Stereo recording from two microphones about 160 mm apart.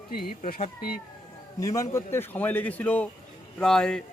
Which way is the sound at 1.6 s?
20° left (ahead or behind).